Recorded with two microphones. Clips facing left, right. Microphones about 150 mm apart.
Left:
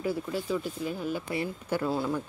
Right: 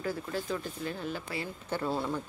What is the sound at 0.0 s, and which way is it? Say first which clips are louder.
Speech: left 3 dB; 10° left (ahead or behind).